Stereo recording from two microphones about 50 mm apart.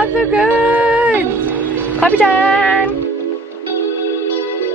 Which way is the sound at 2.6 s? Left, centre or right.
Left.